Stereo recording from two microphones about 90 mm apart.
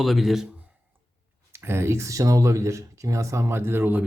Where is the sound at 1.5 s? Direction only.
30° right (ahead or behind).